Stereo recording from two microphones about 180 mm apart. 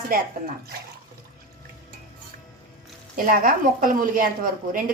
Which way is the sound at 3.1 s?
50° right (ahead or behind).